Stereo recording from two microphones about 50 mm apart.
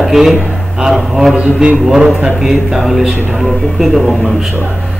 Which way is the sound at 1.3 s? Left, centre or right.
Right.